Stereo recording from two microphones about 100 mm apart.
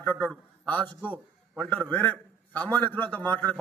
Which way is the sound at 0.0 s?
20° left (ahead or behind).